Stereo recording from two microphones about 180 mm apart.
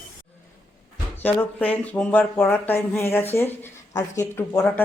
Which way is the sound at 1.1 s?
10° left (ahead or behind).